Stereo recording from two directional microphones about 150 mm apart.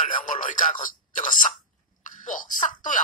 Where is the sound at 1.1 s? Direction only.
60° left (ahead or behind).